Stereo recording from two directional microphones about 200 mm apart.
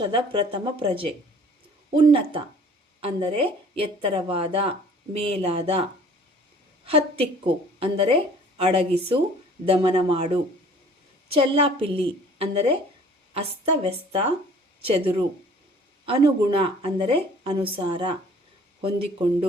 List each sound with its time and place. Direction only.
0.0 s a woman's voice: 25° right (ahead or behind)
6.8 s a woman's voice: 30° right (ahead or behind)
16.0 s a woman's voice: 25° right (ahead or behind)